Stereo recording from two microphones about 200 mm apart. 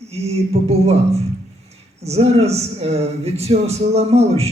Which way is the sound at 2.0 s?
30° right (ahead or behind).